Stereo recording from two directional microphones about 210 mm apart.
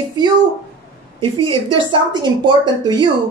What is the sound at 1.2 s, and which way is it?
Speech, 15° left (ahead or behind).